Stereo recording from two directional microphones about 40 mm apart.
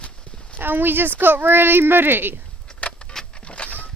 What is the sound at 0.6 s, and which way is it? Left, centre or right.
Speech, right.